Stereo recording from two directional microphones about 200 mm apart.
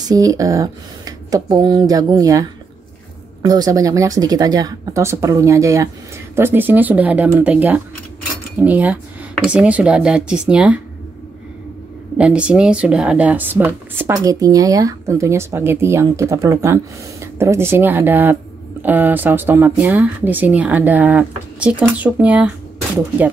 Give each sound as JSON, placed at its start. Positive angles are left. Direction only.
{"t": 0.1, "sound": "speech", "side_deg": -15}
{"t": 3.4, "sound": "speech", "side_deg": -20}
{"t": 12.2, "sound": "speech", "side_deg": -5}